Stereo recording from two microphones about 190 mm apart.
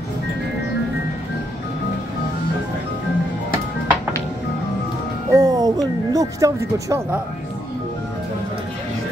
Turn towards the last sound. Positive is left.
turn(degrees=-15)  # may be behind; listen again after turning